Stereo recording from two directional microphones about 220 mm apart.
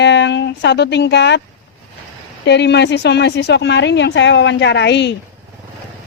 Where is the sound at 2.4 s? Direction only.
50° left (ahead or behind).